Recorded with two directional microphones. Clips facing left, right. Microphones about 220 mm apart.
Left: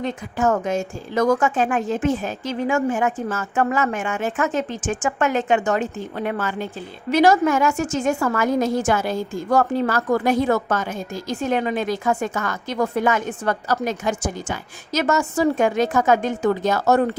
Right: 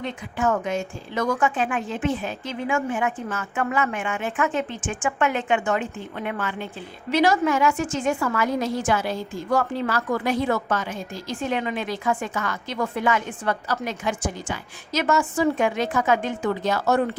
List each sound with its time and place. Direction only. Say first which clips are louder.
0.0 s a woman's voice: left 4 dB; 45° left (ahead or behind)